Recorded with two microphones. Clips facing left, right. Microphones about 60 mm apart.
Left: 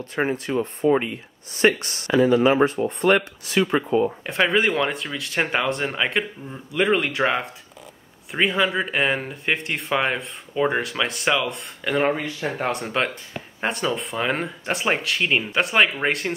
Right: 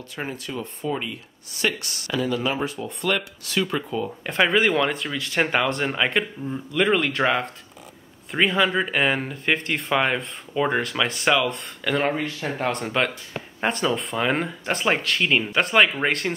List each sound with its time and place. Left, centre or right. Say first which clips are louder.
0.1 s speech: left 8 dB; left
4.2 s speech: even; centre